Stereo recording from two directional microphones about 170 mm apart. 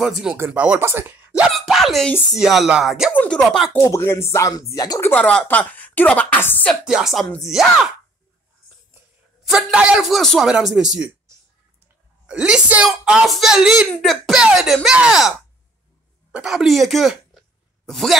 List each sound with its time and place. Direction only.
0.4 s speech: 10° right (ahead or behind)
1.5 s a sound: centre (ahead or behind)
2.3 s speech: centre (ahead or behind)
3.1 s speech: 10° left (ahead or behind)
3.8 s a woman's voice: 15° left (ahead or behind)
5.1 s a woman's voice: 5° left (ahead or behind)
6.8 s speech: 5° right (ahead or behind)
9.4 s speech: 5° right (ahead or behind)
12.3 s speech: 5° right (ahead or behind)